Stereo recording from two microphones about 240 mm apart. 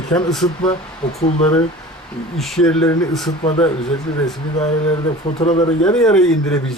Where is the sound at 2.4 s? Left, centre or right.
Centre.